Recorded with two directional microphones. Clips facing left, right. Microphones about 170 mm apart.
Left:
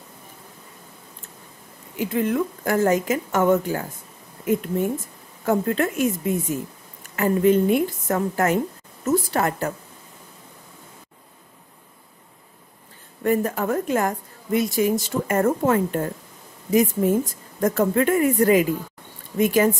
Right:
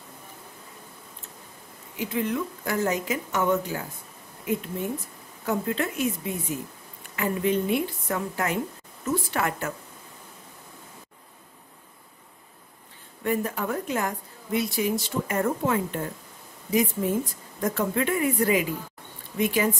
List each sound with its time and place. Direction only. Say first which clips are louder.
2.0 s a woman's voice: left 5 dB; 50° left (ahead or behind)
5.4 s a woman's voice: left 6 dB; 50° left (ahead or behind)
13.2 s a woman's voice: left 5 dB; 45° left (ahead or behind)